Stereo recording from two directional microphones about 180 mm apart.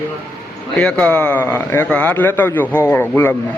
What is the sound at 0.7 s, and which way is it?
A man's voice, 5° left (ahead or behind).